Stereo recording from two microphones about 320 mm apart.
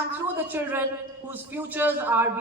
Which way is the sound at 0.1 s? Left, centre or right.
Centre.